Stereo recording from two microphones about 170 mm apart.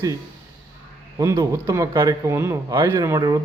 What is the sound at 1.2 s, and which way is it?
A man's voice, 20° right (ahead or behind).